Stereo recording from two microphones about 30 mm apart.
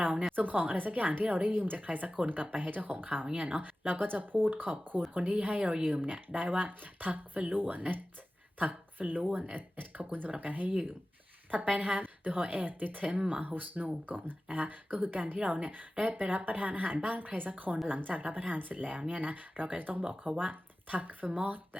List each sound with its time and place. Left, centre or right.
0.0 s speech: right
0.3 s speech: right
0.9 s speech: right
5.1 s speech: right
9.3 s speech: right
9.6 s speech: right
11.9 s a woman's voice: right
14.5 s speech: right
17.8 s speech: right